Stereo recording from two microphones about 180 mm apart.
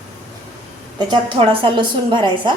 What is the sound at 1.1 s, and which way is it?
A woman's voice, 25° right (ahead or behind).